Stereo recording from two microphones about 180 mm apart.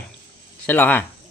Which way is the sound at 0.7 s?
10° left (ahead or behind).